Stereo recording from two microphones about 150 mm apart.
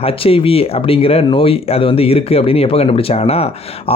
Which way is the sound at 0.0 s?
40° left (ahead or behind).